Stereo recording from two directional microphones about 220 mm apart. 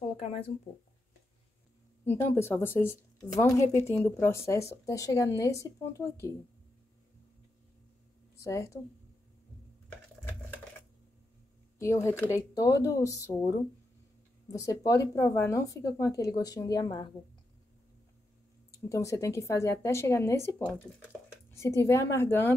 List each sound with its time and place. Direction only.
0.2 s speech: 25° left (ahead or behind)
2.0 s speech: 10° left (ahead or behind)
8.4 s a woman's voice: 15° left (ahead or behind)
11.8 s speech: 15° left (ahead or behind)
14.5 s speech: 15° left (ahead or behind)
18.7 s speech: 15° left (ahead or behind)